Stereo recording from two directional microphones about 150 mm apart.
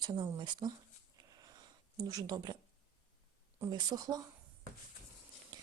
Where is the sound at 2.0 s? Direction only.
25° right (ahead or behind).